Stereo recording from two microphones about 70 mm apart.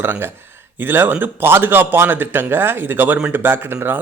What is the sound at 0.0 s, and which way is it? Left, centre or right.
A man's voice, right.